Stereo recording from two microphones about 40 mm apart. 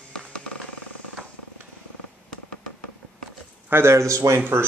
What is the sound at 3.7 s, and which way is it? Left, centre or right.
Speech, right.